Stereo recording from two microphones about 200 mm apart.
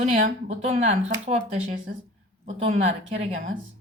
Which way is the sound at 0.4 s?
35° right (ahead or behind).